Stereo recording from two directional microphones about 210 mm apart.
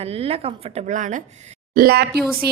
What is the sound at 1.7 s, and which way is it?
Speech, 45° right (ahead or behind).